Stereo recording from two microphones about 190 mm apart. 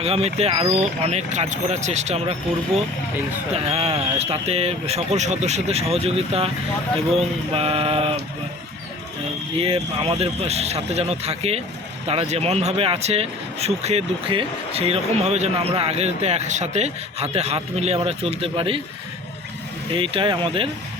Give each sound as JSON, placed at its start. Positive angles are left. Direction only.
{"t": 0.0, "sound": "speech", "side_deg": -35}
{"t": 3.5, "sound": "speech", "side_deg": -30}
{"t": 9.6, "sound": "speech", "side_deg": -30}
{"t": 19.9, "sound": "speech", "side_deg": -30}